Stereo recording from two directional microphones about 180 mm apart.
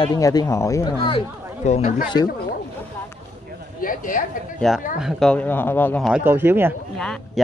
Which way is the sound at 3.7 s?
50° left (ahead or behind).